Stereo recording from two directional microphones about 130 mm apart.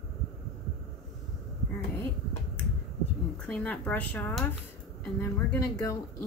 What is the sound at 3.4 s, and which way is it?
Speech, 10° left (ahead or behind).